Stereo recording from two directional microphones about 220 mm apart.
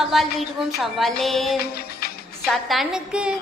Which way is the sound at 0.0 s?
Centre (ahead or behind).